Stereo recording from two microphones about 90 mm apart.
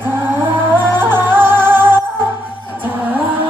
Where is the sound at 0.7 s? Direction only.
25° right (ahead or behind).